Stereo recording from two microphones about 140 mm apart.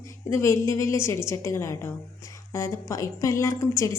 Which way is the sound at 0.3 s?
20° left (ahead or behind).